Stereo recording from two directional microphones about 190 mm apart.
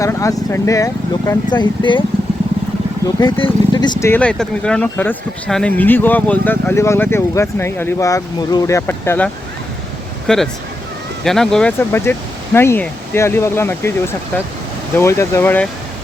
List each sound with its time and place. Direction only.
0.0 s speech: 15° left (ahead or behind)
3.2 s speech: 25° left (ahead or behind)
4.0 s speech: 10° left (ahead or behind)
14.9 s speech: 15° left (ahead or behind)